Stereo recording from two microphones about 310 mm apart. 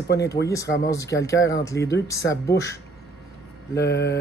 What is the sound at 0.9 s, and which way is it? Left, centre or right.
Speech, centre.